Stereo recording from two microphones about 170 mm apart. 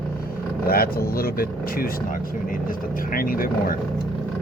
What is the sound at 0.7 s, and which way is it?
Speech, 60° left (ahead or behind).